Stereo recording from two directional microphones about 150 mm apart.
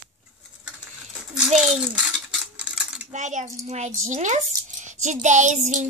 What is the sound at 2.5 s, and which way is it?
Cutlery, 5° right (ahead or behind).